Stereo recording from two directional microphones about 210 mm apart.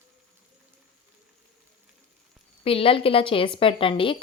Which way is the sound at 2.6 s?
25° left (ahead or behind).